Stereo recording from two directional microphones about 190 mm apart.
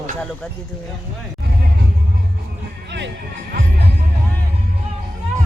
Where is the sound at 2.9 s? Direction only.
65° right (ahead or behind).